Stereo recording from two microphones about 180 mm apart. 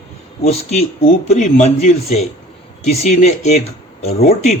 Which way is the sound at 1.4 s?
40° left (ahead or behind).